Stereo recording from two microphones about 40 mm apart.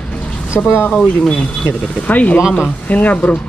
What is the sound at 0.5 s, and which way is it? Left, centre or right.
Speech, left.